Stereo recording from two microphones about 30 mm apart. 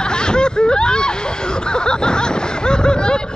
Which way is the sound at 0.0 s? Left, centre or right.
Left.